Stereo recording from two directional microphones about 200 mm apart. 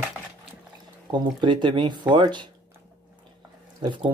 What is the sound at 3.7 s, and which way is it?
Speech, 20° right (ahead or behind).